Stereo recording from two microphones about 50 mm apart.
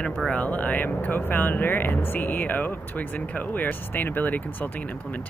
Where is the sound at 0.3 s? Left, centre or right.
Left.